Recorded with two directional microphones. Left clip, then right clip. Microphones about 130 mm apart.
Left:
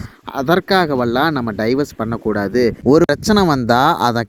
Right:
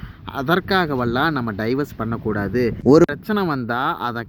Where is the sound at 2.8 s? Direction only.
Centre (ahead or behind).